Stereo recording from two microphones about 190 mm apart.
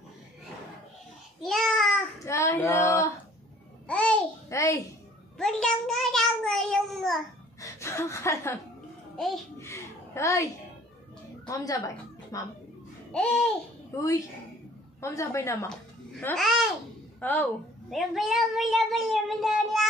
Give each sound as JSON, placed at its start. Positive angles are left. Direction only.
{"t": 1.4, "sound": "babbling", "side_deg": 0}
{"t": 2.2, "sound": "female singing", "side_deg": 15}
{"t": 3.8, "sound": "babbling", "side_deg": 5}
{"t": 5.4, "sound": "a child's voice", "side_deg": 5}
{"t": 7.6, "sound": "speech", "side_deg": 15}
{"t": 9.1, "sound": "a child's voice", "side_deg": 0}
{"t": 9.6, "sound": "a woman's voice", "side_deg": 15}
{"t": 13.1, "sound": "a woman's voice", "side_deg": 5}
{"t": 15.0, "sound": "a woman's voice", "side_deg": 15}
{"t": 16.3, "sound": "a child's voice", "side_deg": 0}